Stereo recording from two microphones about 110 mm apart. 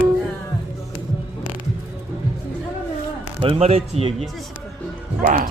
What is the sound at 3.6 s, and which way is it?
Speech, 70° right (ahead or behind).